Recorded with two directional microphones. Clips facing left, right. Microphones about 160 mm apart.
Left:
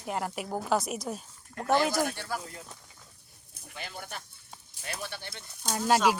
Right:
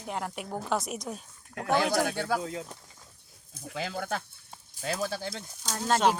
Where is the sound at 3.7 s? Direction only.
90° right.